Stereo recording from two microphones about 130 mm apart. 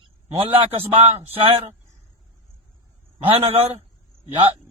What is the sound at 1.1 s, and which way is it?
Speech, 50° right (ahead or behind).